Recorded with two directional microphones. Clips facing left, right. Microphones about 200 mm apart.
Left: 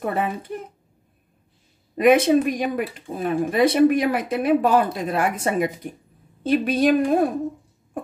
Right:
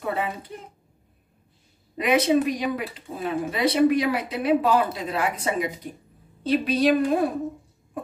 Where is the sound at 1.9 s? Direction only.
50° left (ahead or behind).